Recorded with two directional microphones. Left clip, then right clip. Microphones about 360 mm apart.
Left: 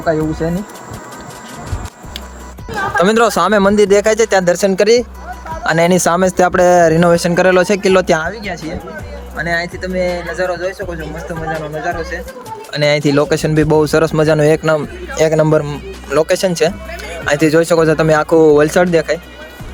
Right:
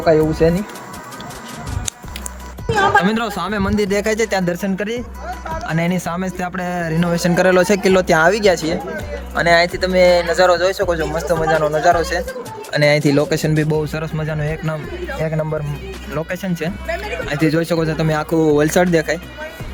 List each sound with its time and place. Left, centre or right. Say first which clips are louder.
0.0 s speech: right 3 dB; centre
3.0 s speech: left 9 dB; centre
9.3 s speech: right 5 dB; centre
12.7 s speech: left 2 dB; centre
16.0 s speech: left 12 dB; centre